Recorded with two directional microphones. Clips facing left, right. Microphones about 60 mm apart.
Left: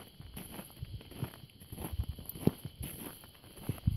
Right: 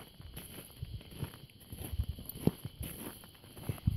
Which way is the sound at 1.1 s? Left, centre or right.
Centre.